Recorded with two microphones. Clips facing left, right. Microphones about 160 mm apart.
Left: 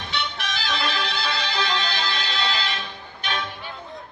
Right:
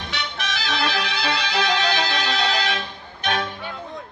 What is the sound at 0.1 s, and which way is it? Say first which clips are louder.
Music: even; 80° right.